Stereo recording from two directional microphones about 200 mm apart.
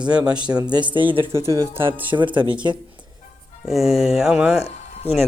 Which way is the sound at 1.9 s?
25° right (ahead or behind).